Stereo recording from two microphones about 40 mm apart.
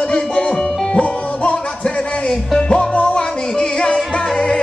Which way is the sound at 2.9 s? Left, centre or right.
Left.